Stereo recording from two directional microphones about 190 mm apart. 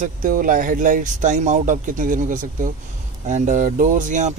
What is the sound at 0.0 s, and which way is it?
Speech, 45° right (ahead or behind).